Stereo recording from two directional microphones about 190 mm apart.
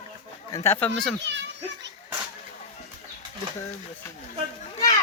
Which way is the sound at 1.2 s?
70° right (ahead or behind).